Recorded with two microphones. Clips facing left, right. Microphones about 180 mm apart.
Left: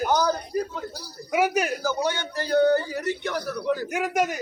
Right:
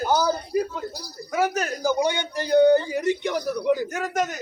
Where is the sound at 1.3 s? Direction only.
10° left (ahead or behind).